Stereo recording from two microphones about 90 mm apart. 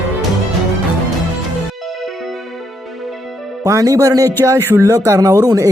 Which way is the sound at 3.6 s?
40° right (ahead or behind).